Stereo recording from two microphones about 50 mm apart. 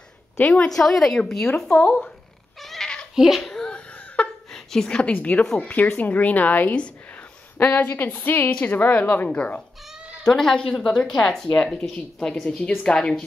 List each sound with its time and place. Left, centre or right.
0.5 s a woman's voice: centre
1.9 s a woman's voice: left
2.6 s cat: centre
3.2 s a sound: centre
5.1 s a woman's voice: left
10.2 s a woman's voice: centre